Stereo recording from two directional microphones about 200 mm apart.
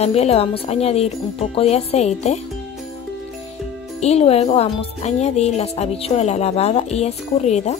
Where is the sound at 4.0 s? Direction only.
30° left (ahead or behind).